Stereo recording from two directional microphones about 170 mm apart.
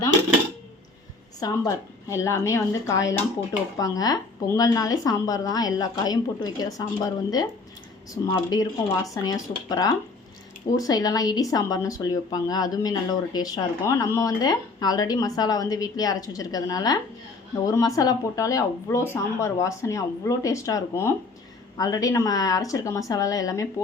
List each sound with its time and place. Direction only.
1.4 s speech: 20° left (ahead or behind)